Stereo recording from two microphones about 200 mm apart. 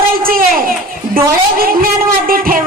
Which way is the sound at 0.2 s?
45° right (ahead or behind).